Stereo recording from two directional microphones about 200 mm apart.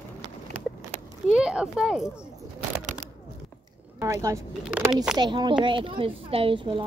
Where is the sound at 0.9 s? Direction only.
35° right (ahead or behind).